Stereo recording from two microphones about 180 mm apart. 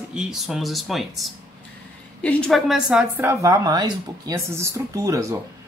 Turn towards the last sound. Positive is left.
turn(degrees=-15)  # may be behind; listen again after turning